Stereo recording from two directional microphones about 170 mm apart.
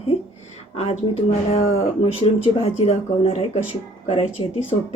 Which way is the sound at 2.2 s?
35° left (ahead or behind).